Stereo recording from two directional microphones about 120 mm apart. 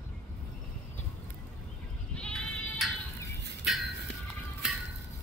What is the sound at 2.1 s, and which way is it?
Goat, 10° left (ahead or behind).